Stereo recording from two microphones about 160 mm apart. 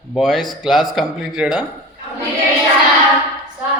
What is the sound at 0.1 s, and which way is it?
A man's voice, centre (ahead or behind).